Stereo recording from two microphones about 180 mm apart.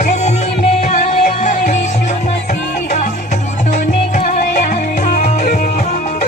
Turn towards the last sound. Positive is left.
turn(degrees=40)  # may be behind; listen again after turning